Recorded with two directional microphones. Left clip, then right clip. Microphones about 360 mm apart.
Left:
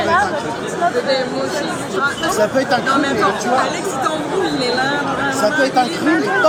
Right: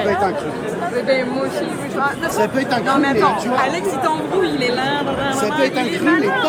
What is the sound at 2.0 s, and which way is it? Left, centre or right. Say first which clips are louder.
Speech: left 2 dB; right.